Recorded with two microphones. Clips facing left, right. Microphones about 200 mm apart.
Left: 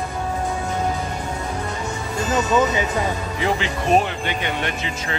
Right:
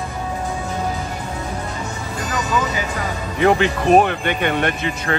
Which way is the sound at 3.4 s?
60° right (ahead or behind).